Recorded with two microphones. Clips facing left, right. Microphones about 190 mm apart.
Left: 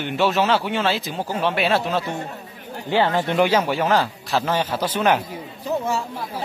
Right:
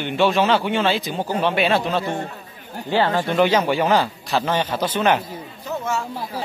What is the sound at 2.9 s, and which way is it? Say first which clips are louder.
Speech: even; 20° left (ahead or behind).